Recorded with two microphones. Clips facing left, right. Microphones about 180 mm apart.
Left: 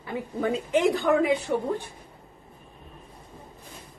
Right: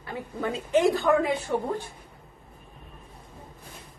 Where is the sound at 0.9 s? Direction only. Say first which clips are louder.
Left 1 dB; 15° left (ahead or behind).